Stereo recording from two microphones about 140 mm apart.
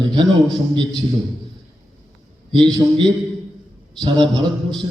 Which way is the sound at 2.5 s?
35° right (ahead or behind).